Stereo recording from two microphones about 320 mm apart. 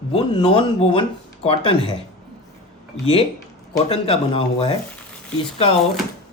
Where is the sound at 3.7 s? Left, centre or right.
Centre.